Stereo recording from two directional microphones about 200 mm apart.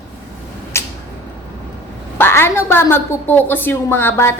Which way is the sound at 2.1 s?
10° left (ahead or behind).